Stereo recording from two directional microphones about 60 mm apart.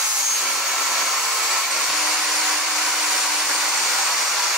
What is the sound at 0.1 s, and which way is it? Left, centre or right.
Hair dryer, centre.